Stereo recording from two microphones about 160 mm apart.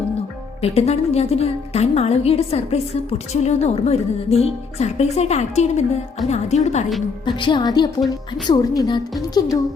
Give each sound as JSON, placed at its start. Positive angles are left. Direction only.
{"t": 0.6, "sound": "a woman's voice", "side_deg": 40}
{"t": 7.3, "sound": "a woman's voice", "side_deg": 30}